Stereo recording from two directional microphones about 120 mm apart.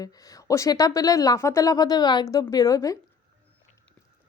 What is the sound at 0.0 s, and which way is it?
A woman's voice, 30° left (ahead or behind).